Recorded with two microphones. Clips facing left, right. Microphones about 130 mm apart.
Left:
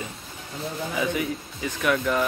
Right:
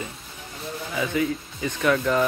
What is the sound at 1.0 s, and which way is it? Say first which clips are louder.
Speech: right 3 dB; 15° left (ahead or behind).